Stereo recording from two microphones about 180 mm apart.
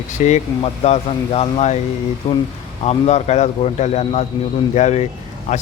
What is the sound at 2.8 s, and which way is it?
Speech, 40° left (ahead or behind).